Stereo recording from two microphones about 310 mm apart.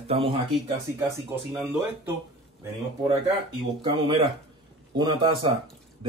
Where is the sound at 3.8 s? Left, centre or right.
Centre.